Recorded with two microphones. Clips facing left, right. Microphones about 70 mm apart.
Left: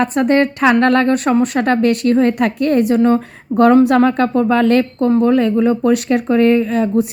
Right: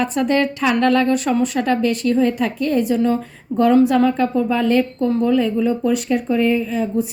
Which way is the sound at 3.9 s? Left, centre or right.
Left.